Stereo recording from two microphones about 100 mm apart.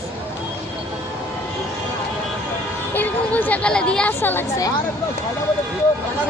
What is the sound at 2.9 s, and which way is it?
Speech, 15° left (ahead or behind).